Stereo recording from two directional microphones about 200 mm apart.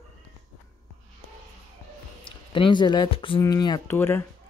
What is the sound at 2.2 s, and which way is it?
Speech, 25° left (ahead or behind).